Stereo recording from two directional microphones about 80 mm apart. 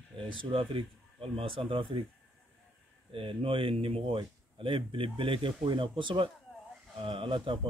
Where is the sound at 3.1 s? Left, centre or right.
Right.